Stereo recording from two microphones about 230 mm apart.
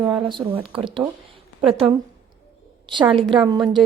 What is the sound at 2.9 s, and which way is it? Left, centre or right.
Speech, right.